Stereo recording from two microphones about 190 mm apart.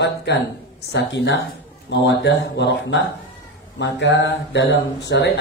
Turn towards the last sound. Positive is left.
turn(degrees=65)  # may be behind; listen again after turning